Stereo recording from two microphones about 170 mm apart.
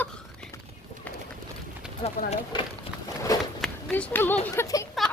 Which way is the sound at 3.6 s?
5° left (ahead or behind).